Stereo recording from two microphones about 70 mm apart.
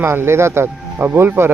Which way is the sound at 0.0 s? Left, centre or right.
Right.